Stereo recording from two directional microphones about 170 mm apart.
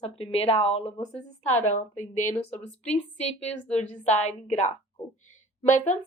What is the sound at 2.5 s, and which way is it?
Speech, 10° left (ahead or behind).